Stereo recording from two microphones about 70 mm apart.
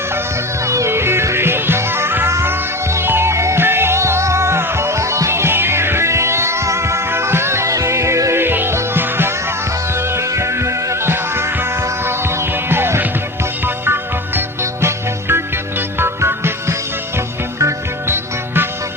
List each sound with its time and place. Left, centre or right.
0.6 s music: right